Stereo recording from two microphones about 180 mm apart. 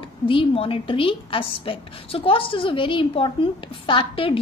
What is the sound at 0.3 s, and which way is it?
A woman's voice, 30° left (ahead or behind).